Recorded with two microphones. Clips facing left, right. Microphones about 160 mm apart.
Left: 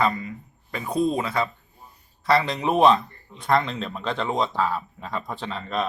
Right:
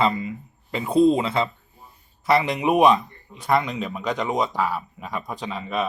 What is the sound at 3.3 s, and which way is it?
A man's voice, 5° right (ahead or behind).